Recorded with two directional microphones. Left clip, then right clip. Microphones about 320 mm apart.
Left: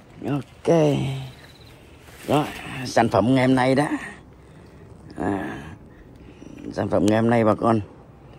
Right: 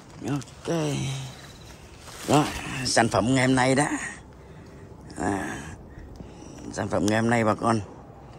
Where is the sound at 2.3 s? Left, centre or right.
Centre.